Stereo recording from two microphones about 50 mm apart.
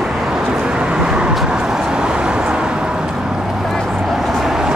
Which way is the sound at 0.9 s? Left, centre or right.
Centre.